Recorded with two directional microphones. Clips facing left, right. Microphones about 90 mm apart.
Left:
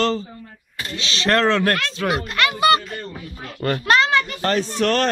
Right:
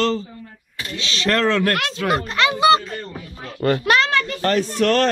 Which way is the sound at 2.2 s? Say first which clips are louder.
Right 2 dB; 25° right (ahead or behind).